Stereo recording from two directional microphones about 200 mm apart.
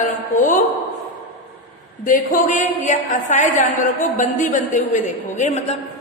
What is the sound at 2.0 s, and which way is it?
A woman's voice, 40° left (ahead or behind).